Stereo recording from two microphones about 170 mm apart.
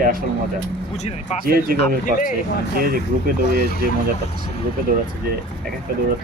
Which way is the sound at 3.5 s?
70° left (ahead or behind).